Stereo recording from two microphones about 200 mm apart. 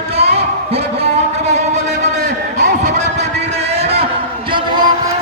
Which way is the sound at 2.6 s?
35° right (ahead or behind).